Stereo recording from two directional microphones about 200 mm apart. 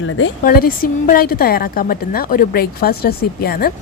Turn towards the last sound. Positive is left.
turn(degrees=50)  # may be behind; listen again after turning